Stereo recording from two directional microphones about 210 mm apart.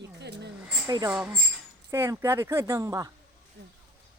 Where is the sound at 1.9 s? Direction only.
15° right (ahead or behind).